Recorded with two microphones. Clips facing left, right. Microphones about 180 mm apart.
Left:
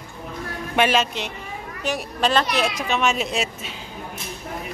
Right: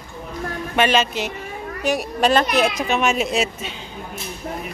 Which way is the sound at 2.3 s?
50° right (ahead or behind).